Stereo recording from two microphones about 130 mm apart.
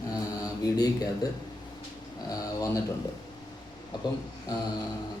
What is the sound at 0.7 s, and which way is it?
Speech, 30° left (ahead or behind).